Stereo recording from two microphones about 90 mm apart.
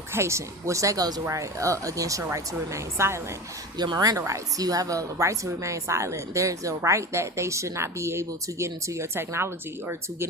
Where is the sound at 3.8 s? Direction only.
50° right (ahead or behind).